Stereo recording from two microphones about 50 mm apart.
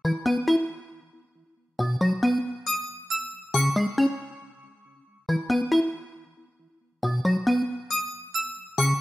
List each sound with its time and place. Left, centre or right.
0.0 s music: centre
1.8 s music: centre
5.2 s music: centre
7.0 s music: centre